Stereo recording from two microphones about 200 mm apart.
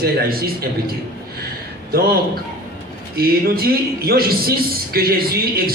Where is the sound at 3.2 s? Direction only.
50° right (ahead or behind).